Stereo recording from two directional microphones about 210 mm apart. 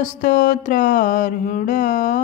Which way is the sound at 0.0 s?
40° left (ahead or behind).